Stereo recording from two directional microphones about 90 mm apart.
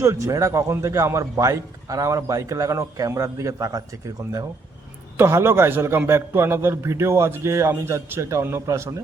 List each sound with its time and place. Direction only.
0.0 s a man's voice: 35° right (ahead or behind)